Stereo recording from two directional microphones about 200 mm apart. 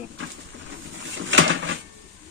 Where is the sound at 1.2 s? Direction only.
70° right (ahead or behind).